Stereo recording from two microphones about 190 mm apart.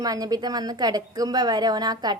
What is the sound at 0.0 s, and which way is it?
A woman's voice, 20° right (ahead or behind).